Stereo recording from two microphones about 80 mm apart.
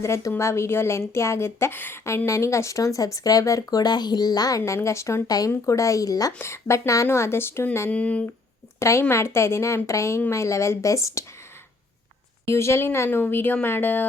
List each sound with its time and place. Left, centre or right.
0.0 s speech: left
6.4 s speech: left
7.9 s speech: centre
8.8 s speech: left
12.5 s speech: left